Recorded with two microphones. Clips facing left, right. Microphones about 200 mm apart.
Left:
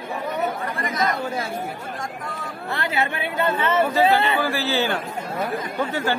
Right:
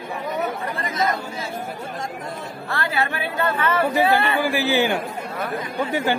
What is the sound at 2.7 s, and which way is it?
A woman's voice, 20° left (ahead or behind).